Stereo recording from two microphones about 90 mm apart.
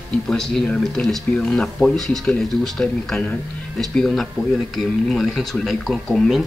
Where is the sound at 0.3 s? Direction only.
5° left (ahead or behind).